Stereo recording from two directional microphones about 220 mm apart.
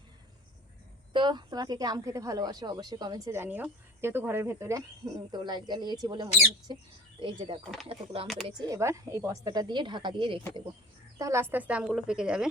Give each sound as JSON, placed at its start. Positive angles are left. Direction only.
{"t": 1.1, "sound": "a woman's voice", "side_deg": -20}
{"t": 11.2, "sound": "a woman's voice", "side_deg": -10}